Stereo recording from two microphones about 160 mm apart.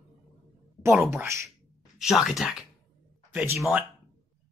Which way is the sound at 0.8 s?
15° right (ahead or behind).